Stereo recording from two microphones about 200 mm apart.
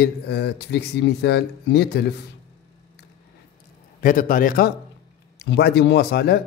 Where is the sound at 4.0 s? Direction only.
45° left (ahead or behind).